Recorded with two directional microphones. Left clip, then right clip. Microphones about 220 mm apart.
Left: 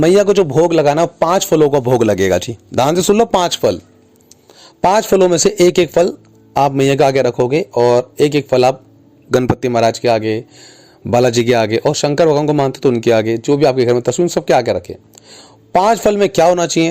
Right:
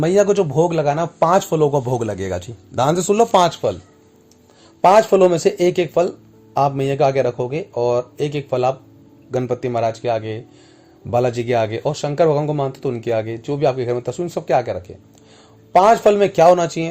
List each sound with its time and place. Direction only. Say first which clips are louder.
0.0 s a man's voice: left 5 dB; 40° left (ahead or behind)
4.8 s a man's voice: even; 45° left (ahead or behind)